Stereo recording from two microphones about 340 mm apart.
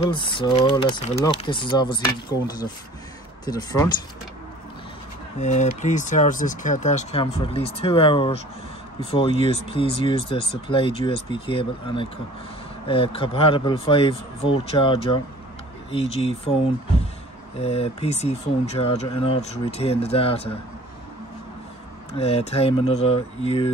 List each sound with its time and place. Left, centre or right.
0.1 s speech: centre
5.4 s speech: left
17.6 s speech: centre
22.1 s speech: centre